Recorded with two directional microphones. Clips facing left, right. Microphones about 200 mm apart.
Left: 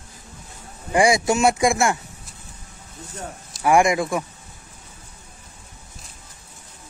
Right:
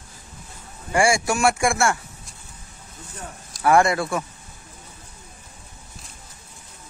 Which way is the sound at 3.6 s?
15° left (ahead or behind).